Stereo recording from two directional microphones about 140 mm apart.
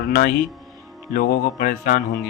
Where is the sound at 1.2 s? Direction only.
80° left.